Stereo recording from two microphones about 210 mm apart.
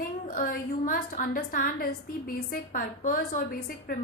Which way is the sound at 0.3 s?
45° left (ahead or behind).